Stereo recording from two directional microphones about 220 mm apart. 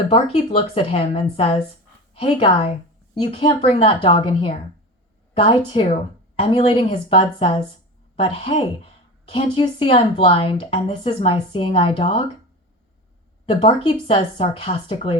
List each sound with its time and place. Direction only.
0.1 s speech: 25° left (ahead or behind)
13.4 s speech: 25° left (ahead or behind)